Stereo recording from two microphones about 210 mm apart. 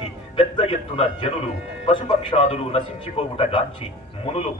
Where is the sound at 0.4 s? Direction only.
25° left (ahead or behind).